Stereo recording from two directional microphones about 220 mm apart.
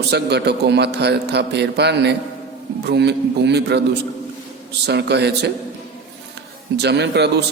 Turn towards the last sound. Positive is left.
turn(degrees=-50)  # may be behind; listen again after turning